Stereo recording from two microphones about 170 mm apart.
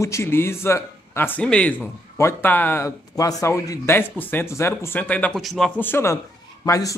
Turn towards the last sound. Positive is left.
turn(degrees=20)  # may be behind; listen again after turning